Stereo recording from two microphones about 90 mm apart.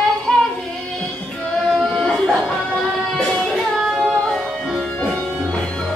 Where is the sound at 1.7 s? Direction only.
5° left (ahead or behind).